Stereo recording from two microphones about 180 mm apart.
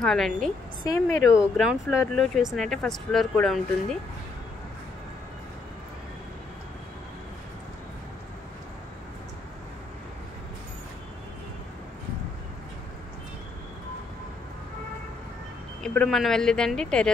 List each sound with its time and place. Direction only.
0.0 s speech: centre (ahead or behind)
0.8 s a woman's voice: 15° left (ahead or behind)
1.6 s speech: 5° right (ahead or behind)
15.8 s speech: 5° left (ahead or behind)